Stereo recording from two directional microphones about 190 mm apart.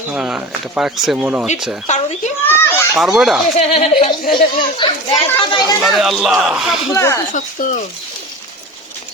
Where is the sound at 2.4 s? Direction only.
10° left (ahead or behind).